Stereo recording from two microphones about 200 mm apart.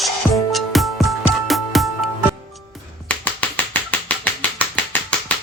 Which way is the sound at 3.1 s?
10° left (ahead or behind).